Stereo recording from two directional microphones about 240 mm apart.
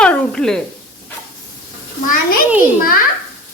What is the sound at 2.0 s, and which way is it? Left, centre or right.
Speech, left.